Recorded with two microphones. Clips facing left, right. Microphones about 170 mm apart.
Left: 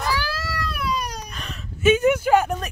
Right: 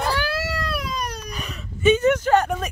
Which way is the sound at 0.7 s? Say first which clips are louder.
Left 1 dB; 45° right (ahead or behind).